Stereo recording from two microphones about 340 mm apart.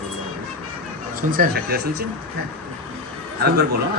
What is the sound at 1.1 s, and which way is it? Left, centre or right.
Speech, right.